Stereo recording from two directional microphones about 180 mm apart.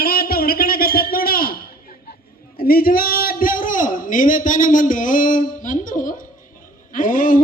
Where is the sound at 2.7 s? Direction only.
55° left (ahead or behind).